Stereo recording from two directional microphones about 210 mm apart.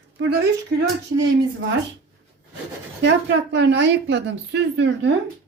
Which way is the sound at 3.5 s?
55° right (ahead or behind).